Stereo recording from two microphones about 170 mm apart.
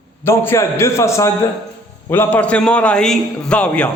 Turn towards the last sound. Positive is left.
turn(degrees=5)  # may be behind; listen again after turning